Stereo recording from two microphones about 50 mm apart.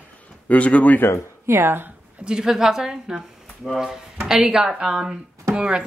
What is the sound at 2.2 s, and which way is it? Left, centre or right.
Speech, centre.